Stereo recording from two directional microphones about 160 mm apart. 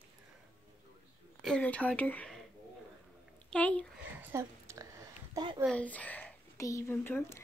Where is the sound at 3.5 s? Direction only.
5° left (ahead or behind).